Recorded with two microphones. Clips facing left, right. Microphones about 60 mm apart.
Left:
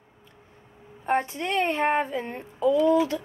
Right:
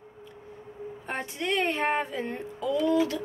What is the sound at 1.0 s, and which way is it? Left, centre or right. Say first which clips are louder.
Speech: left 7 dB; left.